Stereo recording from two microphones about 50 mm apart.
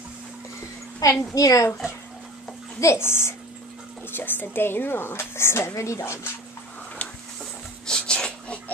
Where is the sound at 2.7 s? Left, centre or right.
Left.